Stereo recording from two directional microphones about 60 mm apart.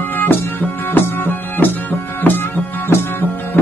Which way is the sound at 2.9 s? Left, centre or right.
Left.